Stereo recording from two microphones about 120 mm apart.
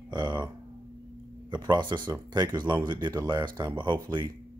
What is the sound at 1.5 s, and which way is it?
Speech, 40° right (ahead or behind).